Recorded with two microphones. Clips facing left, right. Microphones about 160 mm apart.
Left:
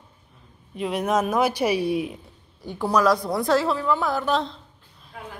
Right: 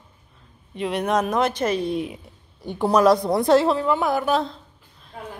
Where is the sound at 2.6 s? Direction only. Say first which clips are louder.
Right 4 dB; 25° right (ahead or behind); by 4.6 s 5° right (ahead or behind).